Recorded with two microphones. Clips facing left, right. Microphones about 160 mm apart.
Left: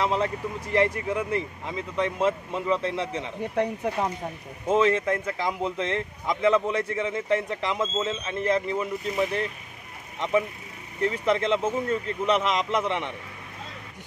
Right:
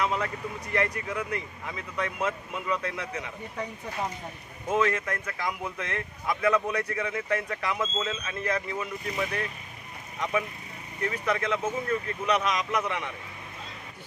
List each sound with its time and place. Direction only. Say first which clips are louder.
0.0 s speech: left 4 dB; 30° left (ahead or behind)
3.5 s speech: left 9 dB; 65° left (ahead or behind)
4.6 s speech: left 5 dB; 25° left (ahead or behind)
11.0 s speech: left 5 dB; 25° left (ahead or behind)